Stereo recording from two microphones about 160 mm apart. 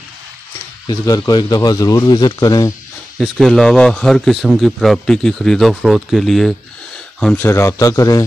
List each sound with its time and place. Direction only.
0.8 s speech: 25° left (ahead or behind)
3.2 s a man's voice: centre (ahead or behind); by 8.3 s 20° left (ahead or behind)